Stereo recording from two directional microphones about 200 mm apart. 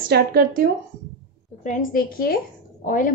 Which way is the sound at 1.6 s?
45° left (ahead or behind).